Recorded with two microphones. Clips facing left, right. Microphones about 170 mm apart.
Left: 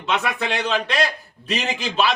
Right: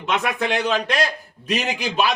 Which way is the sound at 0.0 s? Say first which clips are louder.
Right 1 dB; 15° right (ahead or behind).